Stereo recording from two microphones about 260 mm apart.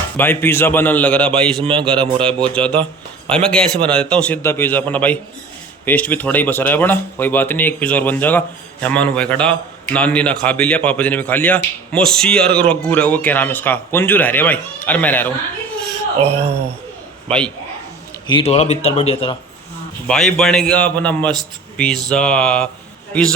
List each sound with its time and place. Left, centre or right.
0.2 s a man's voice: centre
17.2 s a man's voice: centre
18.3 s a man's voice: left
20.1 s speech: centre